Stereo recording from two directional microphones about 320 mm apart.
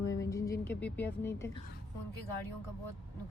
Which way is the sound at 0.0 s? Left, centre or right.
Centre.